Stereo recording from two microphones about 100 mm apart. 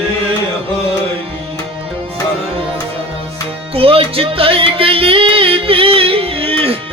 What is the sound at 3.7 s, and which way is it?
Music, 70° right (ahead or behind).